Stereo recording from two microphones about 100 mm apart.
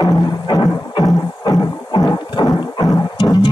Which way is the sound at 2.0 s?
45° left (ahead or behind).